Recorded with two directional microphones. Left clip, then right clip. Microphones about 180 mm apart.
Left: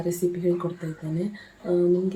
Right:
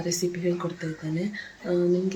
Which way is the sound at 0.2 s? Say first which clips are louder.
Left 5 dB; 10° left (ahead or behind).